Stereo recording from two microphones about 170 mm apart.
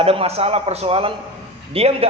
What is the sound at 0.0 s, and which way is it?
A man's voice, 35° right (ahead or behind).